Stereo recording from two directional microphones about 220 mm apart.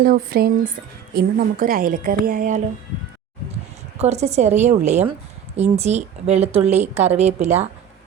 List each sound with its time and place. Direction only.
0.0 s a woman's voice: 40° right (ahead or behind)
3.9 s a woman's voice: 30° right (ahead or behind)